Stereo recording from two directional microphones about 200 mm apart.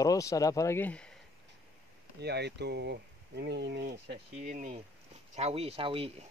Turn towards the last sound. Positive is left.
turn(degrees=-25)  # may be behind; listen again after turning